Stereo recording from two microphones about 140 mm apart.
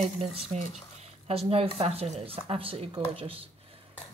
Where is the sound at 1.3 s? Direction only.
45° right (ahead or behind).